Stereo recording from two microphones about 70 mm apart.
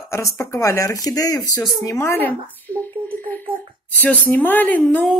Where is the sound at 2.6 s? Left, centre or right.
Left.